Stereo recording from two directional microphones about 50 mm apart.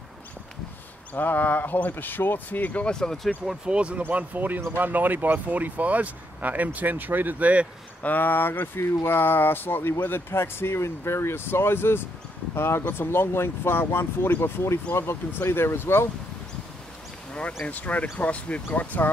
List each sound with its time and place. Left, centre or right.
1.1 s speech: left
2.8 s speech: centre
3.6 s speech: right
4.1 s speech: right
8.0 s speech: left
17.3 s a sound: left
17.6 s speech: left